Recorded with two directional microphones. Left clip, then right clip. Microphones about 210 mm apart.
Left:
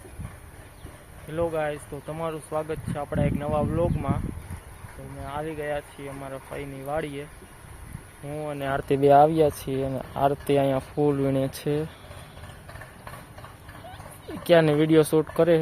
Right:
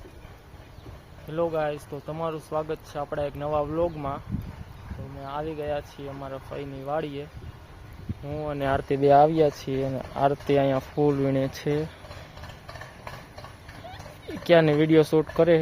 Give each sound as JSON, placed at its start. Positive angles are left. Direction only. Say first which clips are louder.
{"t": 1.3, "sound": "speech", "louder": "even", "side_deg": -15}
{"t": 5.2, "sound": "speech", "louder": "even", "side_deg": -10}
{"t": 8.3, "sound": "speech", "louder": "right 1 dB", "side_deg": -15}
{"t": 8.9, "sound": "speech", "louder": "left 1 dB", "side_deg": 5}
{"t": 14.3, "sound": "speech", "louder": "even", "side_deg": 0}